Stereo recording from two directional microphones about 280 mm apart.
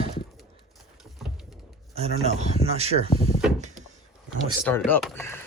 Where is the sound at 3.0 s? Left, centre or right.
Left.